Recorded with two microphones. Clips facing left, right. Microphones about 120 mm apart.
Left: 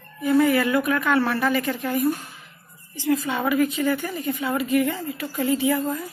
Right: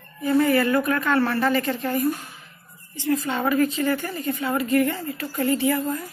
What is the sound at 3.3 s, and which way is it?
A woman's voice, 10° left (ahead or behind).